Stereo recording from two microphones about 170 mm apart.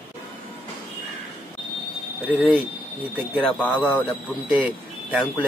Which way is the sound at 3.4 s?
10° left (ahead or behind).